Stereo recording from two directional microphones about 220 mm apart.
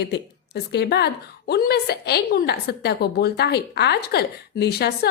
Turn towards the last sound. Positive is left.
turn(degrees=45)  # may be behind; listen again after turning